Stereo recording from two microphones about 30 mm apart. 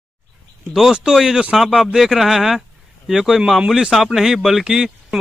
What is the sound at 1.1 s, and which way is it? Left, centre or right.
Speech, right.